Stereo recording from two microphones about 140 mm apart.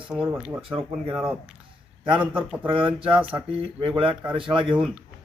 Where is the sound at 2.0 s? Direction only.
35° right (ahead or behind).